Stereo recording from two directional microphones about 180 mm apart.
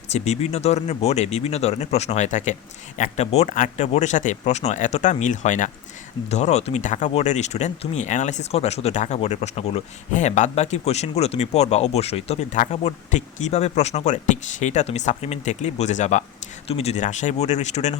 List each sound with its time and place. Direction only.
0.1 s speech: 35° left (ahead or behind)